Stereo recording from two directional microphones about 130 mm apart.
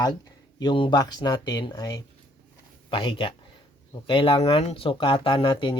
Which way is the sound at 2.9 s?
40° left (ahead or behind).